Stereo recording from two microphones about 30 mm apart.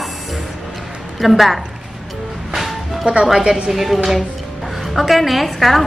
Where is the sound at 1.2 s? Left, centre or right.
Centre.